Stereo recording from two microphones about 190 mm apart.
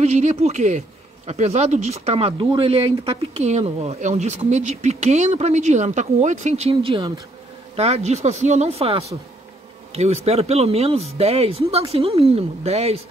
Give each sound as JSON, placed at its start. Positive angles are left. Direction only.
{"t": 0.0, "sound": "speech", "side_deg": -35}